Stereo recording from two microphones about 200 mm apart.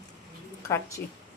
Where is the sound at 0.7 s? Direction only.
15° left (ahead or behind).